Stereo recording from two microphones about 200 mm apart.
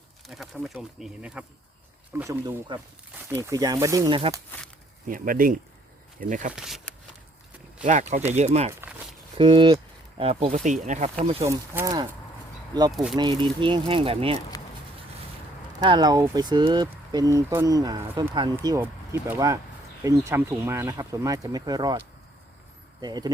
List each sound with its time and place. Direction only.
0.3 s speech: centre (ahead or behind); by 4.4 s 20° right (ahead or behind)
5.0 s speech: 45° right (ahead or behind)
6.6 s speech: centre (ahead or behind)
8.3 s speech: 35° right (ahead or behind)
11.4 s speech: 15° right (ahead or behind)
12.9 s speech: centre (ahead or behind)
13.1 s speech: 25° right (ahead or behind)
14.5 s a sound: 20° left (ahead or behind)
15.8 s speech: 20° right (ahead or behind)